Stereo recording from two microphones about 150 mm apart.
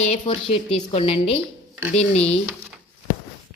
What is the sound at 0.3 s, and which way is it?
A woman's voice, 30° left (ahead or behind).